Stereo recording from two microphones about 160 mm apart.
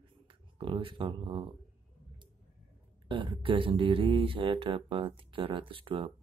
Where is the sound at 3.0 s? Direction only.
30° right (ahead or behind).